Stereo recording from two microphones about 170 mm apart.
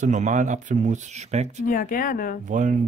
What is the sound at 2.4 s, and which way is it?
Speech, 50° right (ahead or behind).